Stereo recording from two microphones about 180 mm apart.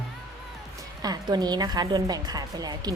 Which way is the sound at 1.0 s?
20° right (ahead or behind).